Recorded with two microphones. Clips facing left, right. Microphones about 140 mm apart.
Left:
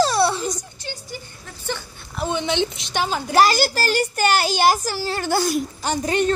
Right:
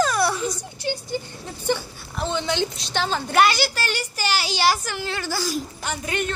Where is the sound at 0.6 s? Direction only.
20° right (ahead or behind).